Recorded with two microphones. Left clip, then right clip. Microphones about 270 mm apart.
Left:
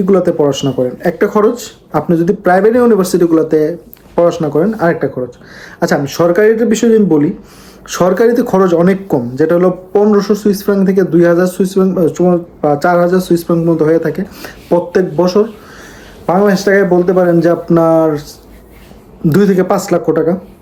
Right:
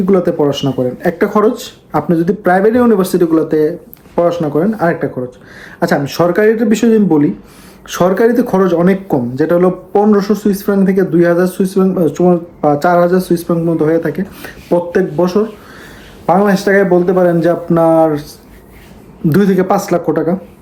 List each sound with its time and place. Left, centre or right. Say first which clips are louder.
0.0 s speech: left 2 dB; centre
19.3 s speech: left 1 dB; centre